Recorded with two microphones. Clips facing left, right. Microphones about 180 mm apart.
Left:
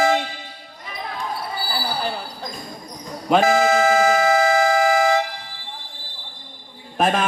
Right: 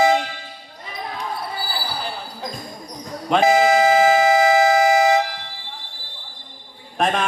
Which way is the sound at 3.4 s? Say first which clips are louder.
Right 3 dB; 15° right (ahead or behind).